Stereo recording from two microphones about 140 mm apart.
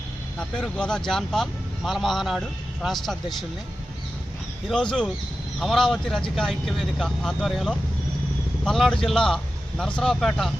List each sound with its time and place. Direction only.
0.3 s speech: 5° left (ahead or behind)
4.7 s speech: 5° left (ahead or behind)